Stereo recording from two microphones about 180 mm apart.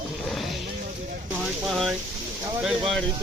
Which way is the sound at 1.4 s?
Centre (ahead or behind).